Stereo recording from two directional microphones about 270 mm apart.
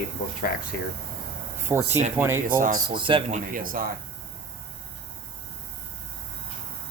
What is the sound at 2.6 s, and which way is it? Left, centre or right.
Speech, right.